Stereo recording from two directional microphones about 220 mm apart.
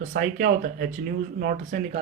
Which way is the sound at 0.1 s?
35° right (ahead or behind).